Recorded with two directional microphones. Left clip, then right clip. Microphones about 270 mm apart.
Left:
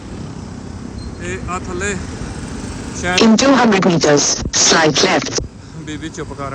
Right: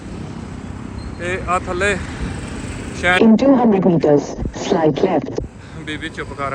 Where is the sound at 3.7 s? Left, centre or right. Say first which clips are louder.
Left 1 dB; right.